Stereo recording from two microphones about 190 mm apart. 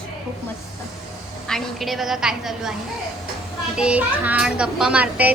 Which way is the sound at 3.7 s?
5° right (ahead or behind).